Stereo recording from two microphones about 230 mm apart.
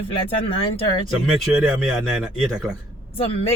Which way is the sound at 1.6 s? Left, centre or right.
Centre.